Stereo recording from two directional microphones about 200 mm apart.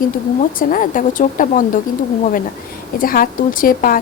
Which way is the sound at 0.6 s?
45° left (ahead or behind).